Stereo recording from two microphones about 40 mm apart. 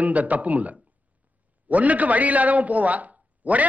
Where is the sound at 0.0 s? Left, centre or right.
Right.